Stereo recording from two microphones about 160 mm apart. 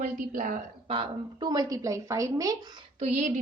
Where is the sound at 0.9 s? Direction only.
30° right (ahead or behind).